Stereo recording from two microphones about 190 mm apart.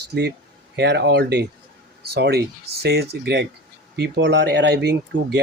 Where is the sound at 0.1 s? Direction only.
60° right (ahead or behind).